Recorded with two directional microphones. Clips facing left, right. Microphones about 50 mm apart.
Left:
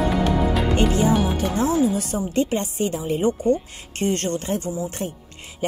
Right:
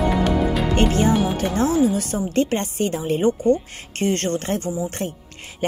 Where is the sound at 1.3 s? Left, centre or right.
Right.